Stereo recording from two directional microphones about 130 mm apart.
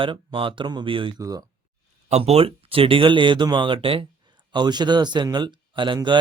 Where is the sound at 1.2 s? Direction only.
30° right (ahead or behind).